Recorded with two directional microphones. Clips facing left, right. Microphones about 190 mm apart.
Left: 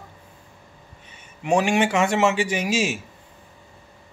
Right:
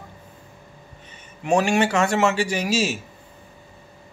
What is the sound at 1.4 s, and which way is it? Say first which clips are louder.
A man's voice: even; 15° left (ahead or behind).